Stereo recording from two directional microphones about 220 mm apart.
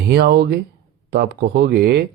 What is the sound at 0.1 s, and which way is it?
Speech, 50° right (ahead or behind).